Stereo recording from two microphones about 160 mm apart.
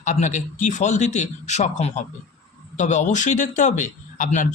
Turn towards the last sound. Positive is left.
turn(degrees=50)  # may be behind; listen again after turning